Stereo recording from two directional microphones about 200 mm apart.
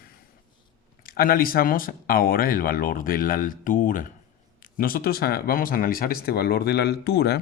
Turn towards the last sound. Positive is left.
turn(degrees=55)  # may be behind; listen again after turning